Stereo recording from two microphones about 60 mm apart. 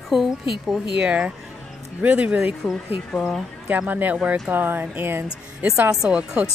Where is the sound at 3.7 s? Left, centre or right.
Right.